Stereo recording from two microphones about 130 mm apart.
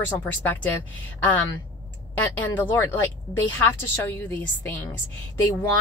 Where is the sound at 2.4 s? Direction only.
15° left (ahead or behind).